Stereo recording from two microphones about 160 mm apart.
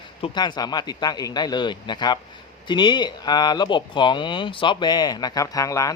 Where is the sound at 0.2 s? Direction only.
25° left (ahead or behind).